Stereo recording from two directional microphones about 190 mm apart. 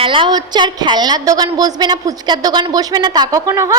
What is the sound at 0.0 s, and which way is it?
A woman's voice, 25° right (ahead or behind).